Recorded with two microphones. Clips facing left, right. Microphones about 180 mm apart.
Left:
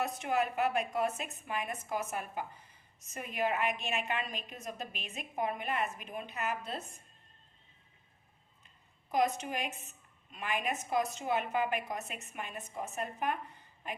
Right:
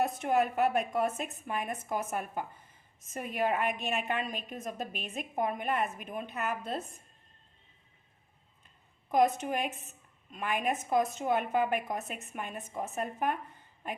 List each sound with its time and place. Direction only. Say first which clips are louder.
0.3 s a woman's voice: right 3 dB; 45° right (ahead or behind)
9.0 s a woman's voice: right 4 dB; 50° right (ahead or behind)